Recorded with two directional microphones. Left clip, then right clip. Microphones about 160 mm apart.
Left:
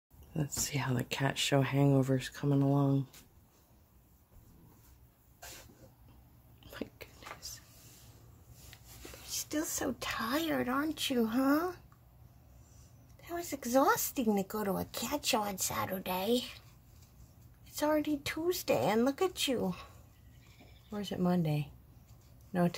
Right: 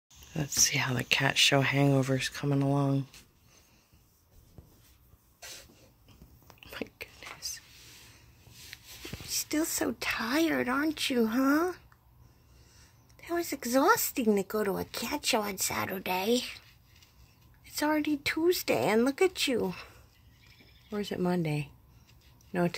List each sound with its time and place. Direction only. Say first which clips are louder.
0.3 s speech: right 10 dB; centre (ahead or behind)
6.6 s whispering: right 5 dB; 10° right (ahead or behind)
8.7 s a sound: right 9 dB; 20° right (ahead or behind)
9.3 s speech: right 5 dB; 20° right (ahead or behind)
13.2 s speech: right 6 dB; 25° right (ahead or behind)
17.7 s speech: right 2 dB; 25° right (ahead or behind)
20.9 s speech: right 3 dB; 25° right (ahead or behind)